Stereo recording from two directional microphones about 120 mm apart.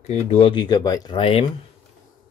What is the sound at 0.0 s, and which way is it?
Speech, 65° left (ahead or behind).